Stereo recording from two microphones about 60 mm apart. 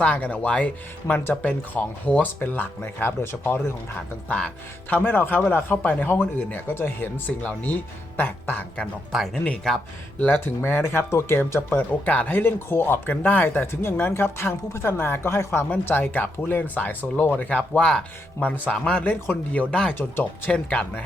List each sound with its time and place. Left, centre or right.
0.0 s speech: left
1.5 s speech: centre
2.2 s speech: left
4.3 s speech: centre
4.9 s speech: left
7.3 s speech: left
9.1 s speech: centre
10.2 s speech: left
12.0 s speech: left
17.7 s speech: centre
19.9 s speech: left
20.5 s speech: left